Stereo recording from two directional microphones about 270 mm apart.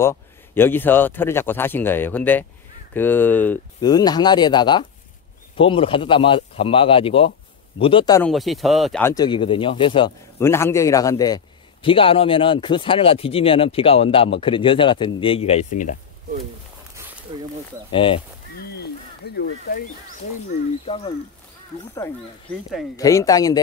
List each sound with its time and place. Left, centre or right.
0.0 s speech: centre
8.3 s speech: centre; by 16.0 s left
17.3 s speech: centre
17.9 s speech: centre
18.6 s a sound: left
20.8 s speech: left
22.9 s speech: centre